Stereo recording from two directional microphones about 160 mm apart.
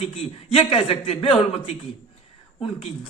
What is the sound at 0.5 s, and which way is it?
Speech, 40° left (ahead or behind).